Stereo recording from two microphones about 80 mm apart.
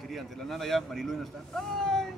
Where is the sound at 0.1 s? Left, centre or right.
Centre.